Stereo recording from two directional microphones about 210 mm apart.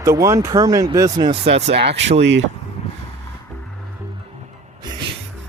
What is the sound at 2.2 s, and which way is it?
Speech, 60° right (ahead or behind).